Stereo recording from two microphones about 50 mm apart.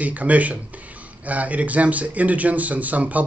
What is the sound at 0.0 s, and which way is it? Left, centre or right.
Speech, right.